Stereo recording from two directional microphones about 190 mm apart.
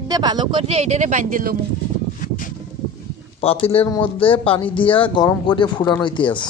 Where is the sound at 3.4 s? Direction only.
30° left (ahead or behind).